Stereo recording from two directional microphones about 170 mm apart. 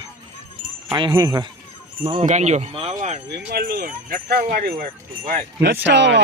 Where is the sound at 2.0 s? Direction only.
40° right (ahead or behind).